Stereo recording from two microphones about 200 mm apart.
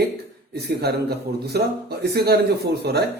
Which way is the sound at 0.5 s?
50° right (ahead or behind).